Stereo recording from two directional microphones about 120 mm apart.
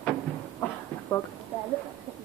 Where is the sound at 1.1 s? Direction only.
35° left (ahead or behind).